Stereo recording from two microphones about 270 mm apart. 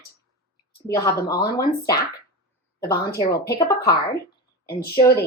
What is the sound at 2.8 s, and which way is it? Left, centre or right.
Speech, left.